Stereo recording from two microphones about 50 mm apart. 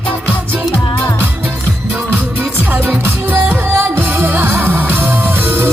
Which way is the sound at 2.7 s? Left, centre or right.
Right.